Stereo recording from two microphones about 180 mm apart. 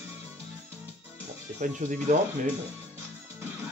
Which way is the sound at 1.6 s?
45° right (ahead or behind).